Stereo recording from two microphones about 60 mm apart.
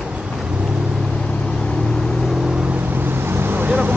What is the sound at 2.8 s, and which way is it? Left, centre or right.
Vehicle, right.